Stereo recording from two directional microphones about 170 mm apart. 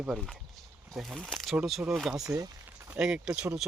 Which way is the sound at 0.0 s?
Centre (ahead or behind).